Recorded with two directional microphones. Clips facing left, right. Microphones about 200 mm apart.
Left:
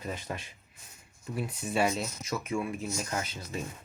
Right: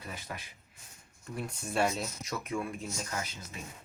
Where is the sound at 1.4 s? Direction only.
5° left (ahead or behind).